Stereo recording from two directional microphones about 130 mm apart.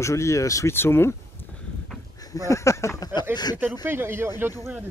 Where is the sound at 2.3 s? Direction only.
25° left (ahead or behind).